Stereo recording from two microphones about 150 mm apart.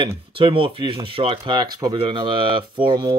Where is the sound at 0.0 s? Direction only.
35° right (ahead or behind).